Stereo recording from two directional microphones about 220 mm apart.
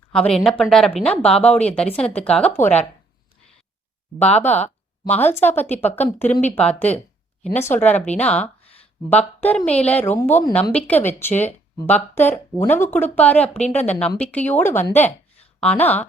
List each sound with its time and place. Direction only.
0.1 s a woman's voice: 5° left (ahead or behind)
4.2 s a woman's voice: 5° left (ahead or behind)
8.6 s a sound: 25° left (ahead or behind)
9.0 s a woman's voice: 10° left (ahead or behind)